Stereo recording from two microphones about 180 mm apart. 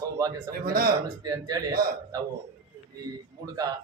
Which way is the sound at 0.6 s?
55° right (ahead or behind).